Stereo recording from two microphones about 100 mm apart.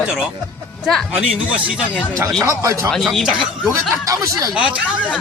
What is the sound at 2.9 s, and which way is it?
Speech, 5° left (ahead or behind).